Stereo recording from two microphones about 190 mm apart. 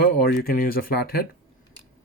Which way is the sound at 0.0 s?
55° left (ahead or behind).